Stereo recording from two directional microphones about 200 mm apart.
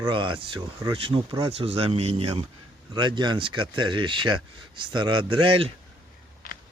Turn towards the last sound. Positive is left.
turn(degrees=-25)  # may be behind; listen again after turning